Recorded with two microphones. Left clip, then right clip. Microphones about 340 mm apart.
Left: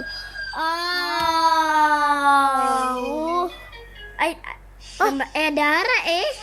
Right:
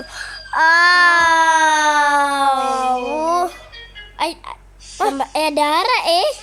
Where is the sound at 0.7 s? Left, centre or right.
Right.